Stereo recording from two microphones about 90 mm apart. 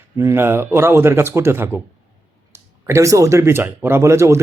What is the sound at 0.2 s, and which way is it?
Speech, 30° right (ahead or behind).